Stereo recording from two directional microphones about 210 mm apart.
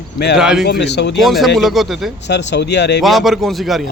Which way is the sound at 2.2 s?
55° left (ahead or behind).